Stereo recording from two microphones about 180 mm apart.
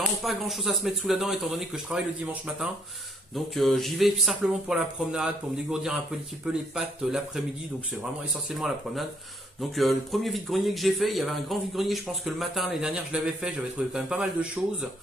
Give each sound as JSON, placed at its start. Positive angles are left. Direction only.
{"t": 0.2, "sound": "speech", "side_deg": 0}
{"t": 8.5, "sound": "speech", "side_deg": 0}